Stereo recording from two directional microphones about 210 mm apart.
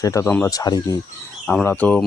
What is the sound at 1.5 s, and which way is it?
Speech, 5° left (ahead or behind).